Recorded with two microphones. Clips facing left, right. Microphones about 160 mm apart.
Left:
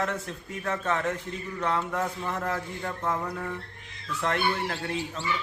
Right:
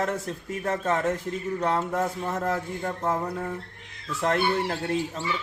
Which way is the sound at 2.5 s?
30° right (ahead or behind).